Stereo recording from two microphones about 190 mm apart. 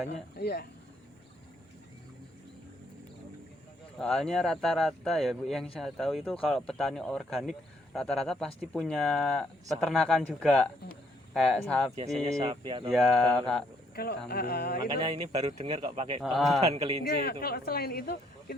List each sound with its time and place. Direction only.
0.3 s speech: 60° left (ahead or behind)
3.9 s speech: centre (ahead or behind)
12.5 s speech: 25° right (ahead or behind)
12.9 s speech: centre (ahead or behind)
13.9 s speech: 55° left (ahead or behind)
14.8 s speech: 25° right (ahead or behind)
16.2 s speech: centre (ahead or behind)
16.6 s a man's voice: 35° right (ahead or behind)
17.0 s speech: 55° left (ahead or behind)